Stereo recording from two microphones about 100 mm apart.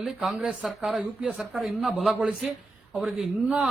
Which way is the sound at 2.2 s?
15° right (ahead or behind).